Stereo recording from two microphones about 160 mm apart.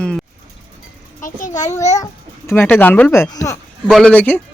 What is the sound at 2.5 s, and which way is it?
Speech, 15° left (ahead or behind).